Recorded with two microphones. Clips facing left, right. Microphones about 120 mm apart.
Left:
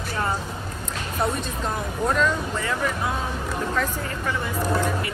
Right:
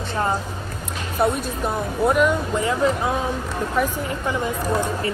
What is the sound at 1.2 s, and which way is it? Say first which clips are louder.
A woman's voice: right 5 dB; 10° right (ahead or behind).